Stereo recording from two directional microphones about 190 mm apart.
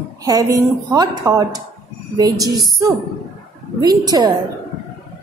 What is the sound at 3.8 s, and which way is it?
Speech, 20° right (ahead or behind).